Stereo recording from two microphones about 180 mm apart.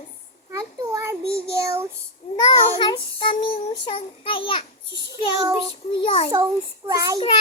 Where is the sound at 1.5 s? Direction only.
15° right (ahead or behind).